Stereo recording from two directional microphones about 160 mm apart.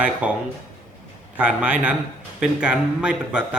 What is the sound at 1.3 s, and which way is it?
Speech, 10° right (ahead or behind).